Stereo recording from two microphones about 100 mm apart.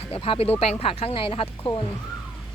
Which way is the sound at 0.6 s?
90° left.